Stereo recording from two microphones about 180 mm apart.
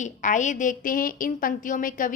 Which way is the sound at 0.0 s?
45° left (ahead or behind).